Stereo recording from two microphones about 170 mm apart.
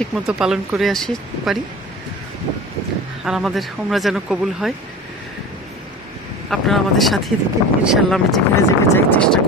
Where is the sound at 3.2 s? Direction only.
Centre (ahead or behind).